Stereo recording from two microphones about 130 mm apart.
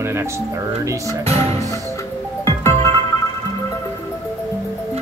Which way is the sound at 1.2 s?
50° right (ahead or behind).